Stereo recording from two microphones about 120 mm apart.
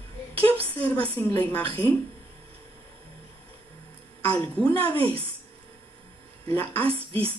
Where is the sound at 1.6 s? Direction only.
50° right (ahead or behind).